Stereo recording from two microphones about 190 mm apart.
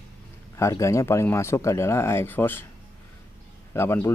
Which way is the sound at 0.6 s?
15° left (ahead or behind).